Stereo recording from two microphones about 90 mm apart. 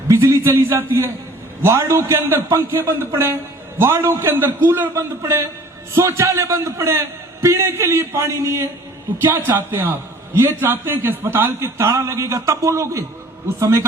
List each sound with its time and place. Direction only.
0.1 s a man's voice: 30° right (ahead or behind)